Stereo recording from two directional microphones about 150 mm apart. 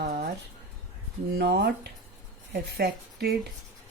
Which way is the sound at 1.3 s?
90° right.